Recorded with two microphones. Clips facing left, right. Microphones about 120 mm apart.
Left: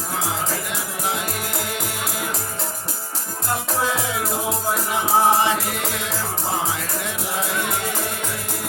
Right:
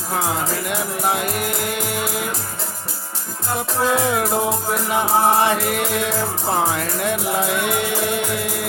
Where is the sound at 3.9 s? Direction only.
55° right (ahead or behind).